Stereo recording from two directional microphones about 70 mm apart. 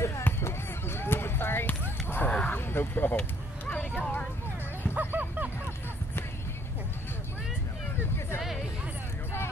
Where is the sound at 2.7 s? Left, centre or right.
Left; by 4.3 s centre.